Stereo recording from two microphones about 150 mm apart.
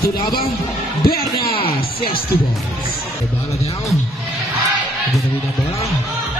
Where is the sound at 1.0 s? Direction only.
90° left.